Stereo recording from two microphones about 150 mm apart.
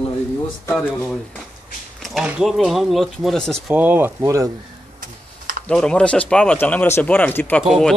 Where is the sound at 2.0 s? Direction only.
5° right (ahead or behind).